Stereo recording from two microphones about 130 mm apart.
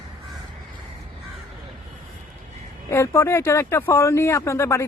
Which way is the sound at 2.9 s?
20° left (ahead or behind).